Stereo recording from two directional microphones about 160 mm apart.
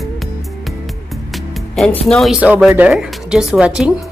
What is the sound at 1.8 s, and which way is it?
Speech, centre (ahead or behind).